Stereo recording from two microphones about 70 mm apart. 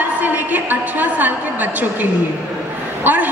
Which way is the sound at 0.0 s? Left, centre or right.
Right.